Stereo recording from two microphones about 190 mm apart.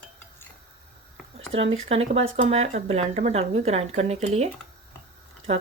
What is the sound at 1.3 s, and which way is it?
Speech, 30° right (ahead or behind).